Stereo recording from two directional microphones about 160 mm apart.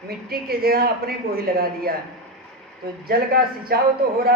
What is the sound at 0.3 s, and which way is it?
A woman's voice, 70° right (ahead or behind).